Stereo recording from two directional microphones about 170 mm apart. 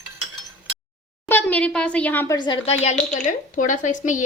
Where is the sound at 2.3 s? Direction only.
30° left (ahead or behind).